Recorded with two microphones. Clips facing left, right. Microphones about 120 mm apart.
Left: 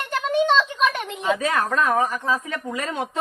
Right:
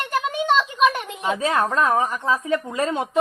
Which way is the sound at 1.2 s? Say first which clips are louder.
Right 1 dB; 25° right (ahead or behind).